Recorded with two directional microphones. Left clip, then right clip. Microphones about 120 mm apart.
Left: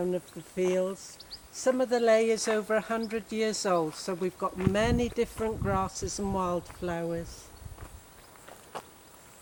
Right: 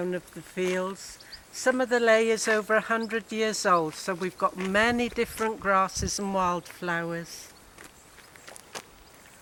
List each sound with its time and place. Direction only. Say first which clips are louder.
0.0 s speech: even; 40° right (ahead or behind)